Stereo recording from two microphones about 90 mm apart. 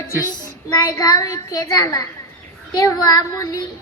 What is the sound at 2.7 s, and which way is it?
Child singing, 45° left (ahead or behind).